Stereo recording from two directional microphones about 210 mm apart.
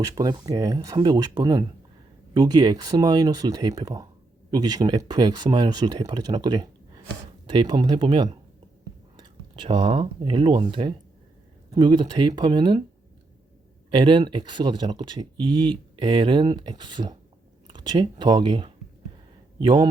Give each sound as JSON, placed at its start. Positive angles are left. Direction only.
{"t": 0.0, "sound": "speech", "side_deg": -15}
{"t": 13.9, "sound": "a man's voice", "side_deg": -20}